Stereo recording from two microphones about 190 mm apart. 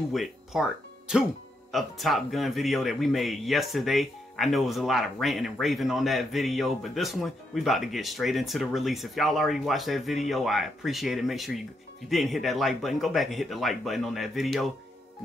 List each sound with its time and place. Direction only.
0.1 s speech: centre (ahead or behind)